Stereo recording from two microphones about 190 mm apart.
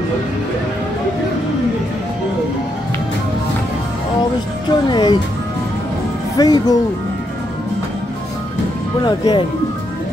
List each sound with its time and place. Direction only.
4.6 s speech: 25° left (ahead or behind)
6.3 s speech: 20° left (ahead or behind)
9.0 s speech: 20° left (ahead or behind)